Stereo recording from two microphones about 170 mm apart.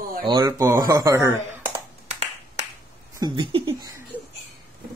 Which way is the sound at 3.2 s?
25° right (ahead or behind).